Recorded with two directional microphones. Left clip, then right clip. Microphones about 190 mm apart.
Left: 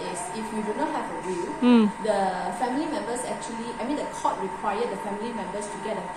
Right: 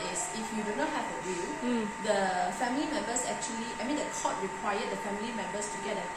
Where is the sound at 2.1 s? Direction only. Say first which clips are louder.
Left 3 dB; centre (ahead or behind).